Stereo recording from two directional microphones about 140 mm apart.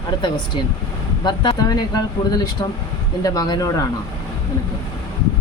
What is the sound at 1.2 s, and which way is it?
Speech, 35° left (ahead or behind).